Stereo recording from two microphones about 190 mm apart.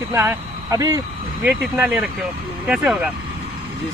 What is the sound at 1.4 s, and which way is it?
Speech, 5° right (ahead or behind).